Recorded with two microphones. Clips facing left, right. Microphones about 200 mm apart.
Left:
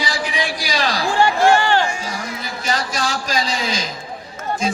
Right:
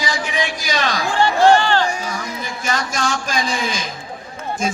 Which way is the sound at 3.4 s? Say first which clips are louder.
Even; 50° right (ahead or behind).